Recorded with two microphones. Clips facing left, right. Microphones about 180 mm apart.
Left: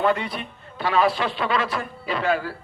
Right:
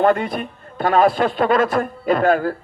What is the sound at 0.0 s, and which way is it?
A man's voice, 50° right (ahead or behind).